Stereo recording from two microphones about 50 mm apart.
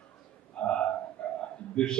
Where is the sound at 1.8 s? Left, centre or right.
Centre.